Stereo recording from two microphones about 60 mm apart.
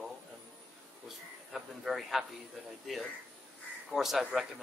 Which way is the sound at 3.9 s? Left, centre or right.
Centre.